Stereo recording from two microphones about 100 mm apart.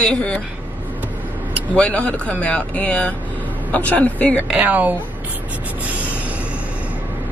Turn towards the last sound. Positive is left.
turn(degrees=-15)  # may be behind; listen again after turning